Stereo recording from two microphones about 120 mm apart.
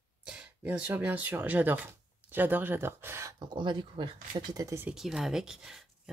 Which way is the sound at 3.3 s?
40° right (ahead or behind).